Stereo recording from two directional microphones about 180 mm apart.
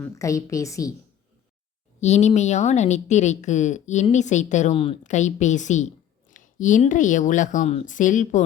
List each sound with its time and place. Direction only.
0.0 s a woman's voice: 15° left (ahead or behind)
2.0 s a woman's voice: 40° left (ahead or behind)
5.0 s a woman's voice: 40° left (ahead or behind)